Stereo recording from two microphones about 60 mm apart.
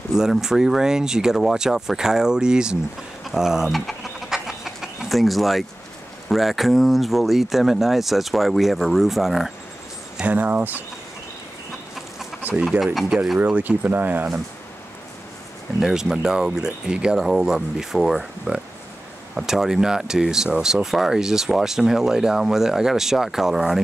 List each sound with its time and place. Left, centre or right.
0.1 s speech: centre
3.3 s a sound: centre
6.2 s speech: centre
10.2 s speech: right
12.8 s speech: centre
13.4 s speech: right
15.8 s speech: centre